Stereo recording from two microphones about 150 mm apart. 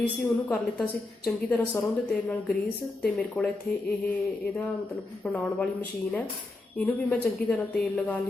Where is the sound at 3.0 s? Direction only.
5° left (ahead or behind).